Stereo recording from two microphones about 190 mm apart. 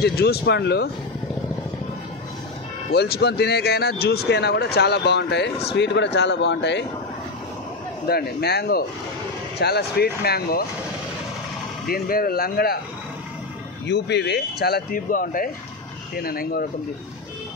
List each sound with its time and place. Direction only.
0.0 s speech: 60° left (ahead or behind)
2.9 s speech: 60° left (ahead or behind)
8.1 s speech: 55° left (ahead or behind)
11.9 s speech: 50° left (ahead or behind)
13.8 s speech: 65° left (ahead or behind)